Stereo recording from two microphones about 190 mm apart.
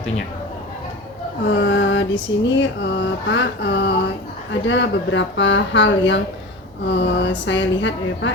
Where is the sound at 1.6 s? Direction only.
70° left (ahead or behind).